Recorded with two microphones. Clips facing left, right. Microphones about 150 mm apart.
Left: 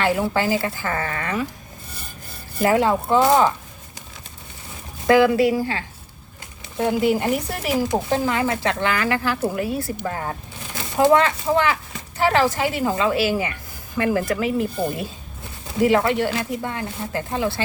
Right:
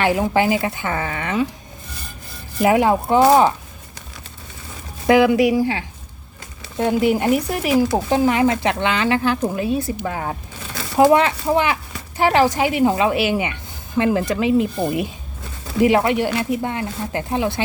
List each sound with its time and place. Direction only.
0.0 s speech: 15° right (ahead or behind)
2.6 s speech: 15° right (ahead or behind)
5.0 s speech: 20° right (ahead or behind)
10.9 s speech: 15° right (ahead or behind)
16.0 s speech: 15° right (ahead or behind)